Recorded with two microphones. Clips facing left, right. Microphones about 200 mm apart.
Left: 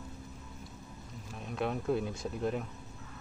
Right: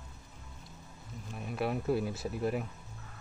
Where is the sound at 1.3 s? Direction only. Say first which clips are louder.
Right 1 dB; 5° right (ahead or behind).